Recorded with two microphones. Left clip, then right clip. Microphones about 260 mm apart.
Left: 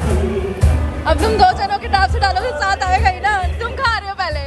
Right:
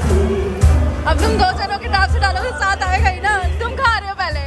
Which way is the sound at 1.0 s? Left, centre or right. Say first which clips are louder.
Left 4 dB; centre.